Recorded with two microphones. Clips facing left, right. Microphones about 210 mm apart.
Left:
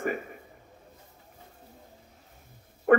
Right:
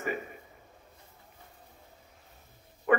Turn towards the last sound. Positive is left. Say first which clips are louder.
# left 6 dB
turn(degrees=55)  # may be behind; listen again after turning